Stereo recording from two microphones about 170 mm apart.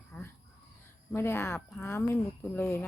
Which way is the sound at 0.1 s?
15° left (ahead or behind).